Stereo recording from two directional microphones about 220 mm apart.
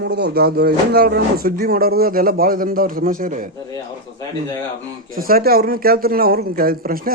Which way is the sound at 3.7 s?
15° left (ahead or behind).